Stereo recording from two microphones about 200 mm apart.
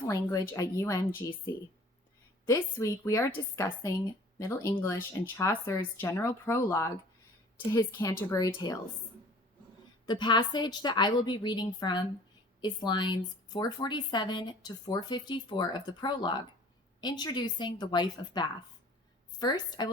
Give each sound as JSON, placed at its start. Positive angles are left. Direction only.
{"t": 0.1, "sound": "speech", "side_deg": 15}
{"t": 10.1, "sound": "a woman's voice", "side_deg": 20}